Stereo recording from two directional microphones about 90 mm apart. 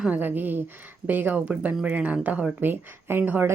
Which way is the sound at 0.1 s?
20° right (ahead or behind).